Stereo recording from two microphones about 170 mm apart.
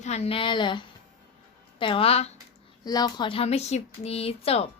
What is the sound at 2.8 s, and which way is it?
A woman's voice, 25° left (ahead or behind).